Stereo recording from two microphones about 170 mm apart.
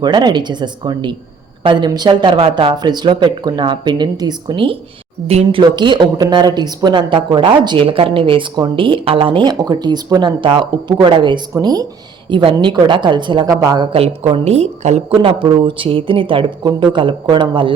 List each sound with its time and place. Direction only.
0.0 s speech: 25° right (ahead or behind)
13.9 s a woman's voice: 35° right (ahead or behind)